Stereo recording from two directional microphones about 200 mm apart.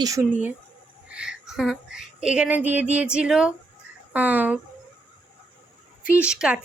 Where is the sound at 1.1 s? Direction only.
5° right (ahead or behind).